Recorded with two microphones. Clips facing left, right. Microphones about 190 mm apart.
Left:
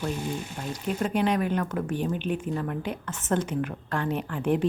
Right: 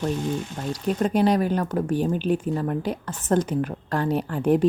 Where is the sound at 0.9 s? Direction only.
40° right (ahead or behind).